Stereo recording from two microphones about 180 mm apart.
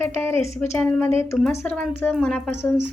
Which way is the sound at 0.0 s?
15° left (ahead or behind).